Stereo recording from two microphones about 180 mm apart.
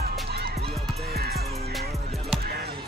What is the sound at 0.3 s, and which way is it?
Music, 65° right (ahead or behind).